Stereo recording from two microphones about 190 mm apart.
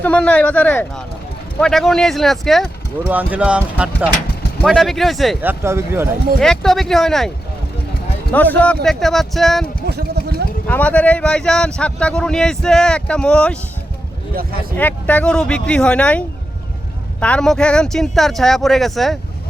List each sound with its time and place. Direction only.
0.0 s speech: 5° left (ahead or behind)
5.4 s speech: 10° right (ahead or behind)
6.4 s speech: 5° left (ahead or behind)
8.3 s speech: 10° left (ahead or behind)
9.8 s a sound: 55° right (ahead or behind)
10.7 s speech: 10° left (ahead or behind)
14.8 s speech: 10° left (ahead or behind)